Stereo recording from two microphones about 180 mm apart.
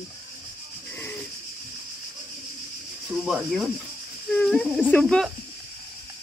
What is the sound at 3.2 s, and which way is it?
Speech, centre (ahead or behind).